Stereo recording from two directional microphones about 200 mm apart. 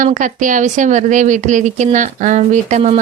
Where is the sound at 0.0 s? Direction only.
40° right (ahead or behind).